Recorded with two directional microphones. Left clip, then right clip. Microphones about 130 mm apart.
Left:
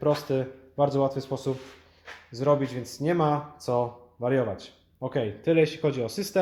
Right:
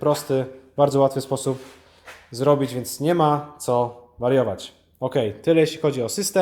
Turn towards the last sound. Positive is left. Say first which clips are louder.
# right 5 dB
turn(degrees=-15)  # may be behind; listen again after turning